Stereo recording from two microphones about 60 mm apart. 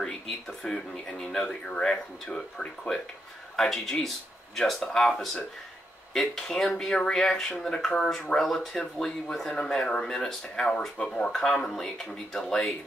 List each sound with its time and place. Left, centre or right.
0.0 s speech: centre